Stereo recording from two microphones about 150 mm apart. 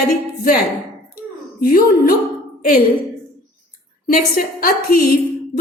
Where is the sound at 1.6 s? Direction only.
75° left (ahead or behind).